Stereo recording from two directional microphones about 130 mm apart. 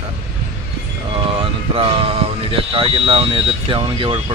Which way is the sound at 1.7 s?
45° right (ahead or behind).